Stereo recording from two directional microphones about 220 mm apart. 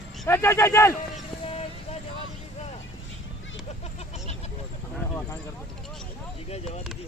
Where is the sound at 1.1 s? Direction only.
30° left (ahead or behind).